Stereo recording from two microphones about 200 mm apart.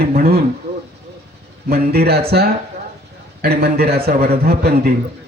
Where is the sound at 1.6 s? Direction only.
50° right (ahead or behind).